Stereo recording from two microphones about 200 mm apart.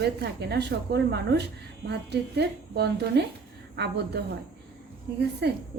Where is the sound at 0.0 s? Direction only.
55° right (ahead or behind).